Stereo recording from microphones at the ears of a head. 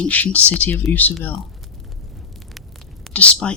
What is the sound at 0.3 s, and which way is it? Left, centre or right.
Speech, left.